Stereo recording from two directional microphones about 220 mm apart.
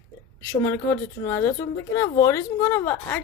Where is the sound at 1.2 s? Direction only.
10° left (ahead or behind).